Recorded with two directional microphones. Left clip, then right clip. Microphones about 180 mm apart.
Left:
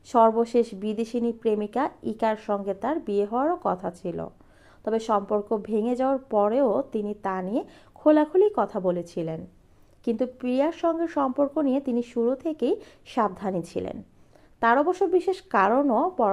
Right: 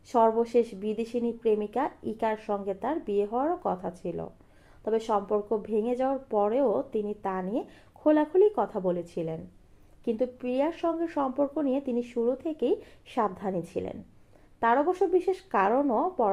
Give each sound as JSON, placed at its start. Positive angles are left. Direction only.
{"t": 0.1, "sound": "speech", "side_deg": 25}